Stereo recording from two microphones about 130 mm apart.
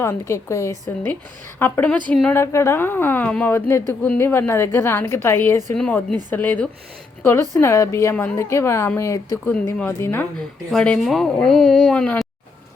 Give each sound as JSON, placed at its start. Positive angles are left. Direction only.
{"t": 0.0, "sound": "a woman's voice", "side_deg": 20}
{"t": 10.7, "sound": "speech", "side_deg": 5}